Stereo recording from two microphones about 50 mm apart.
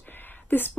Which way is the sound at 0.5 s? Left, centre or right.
Left.